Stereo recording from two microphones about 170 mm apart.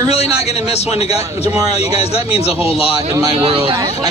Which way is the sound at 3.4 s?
30° right (ahead or behind).